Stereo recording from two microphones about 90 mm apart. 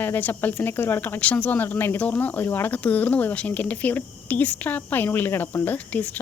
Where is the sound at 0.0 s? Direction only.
20° left (ahead or behind).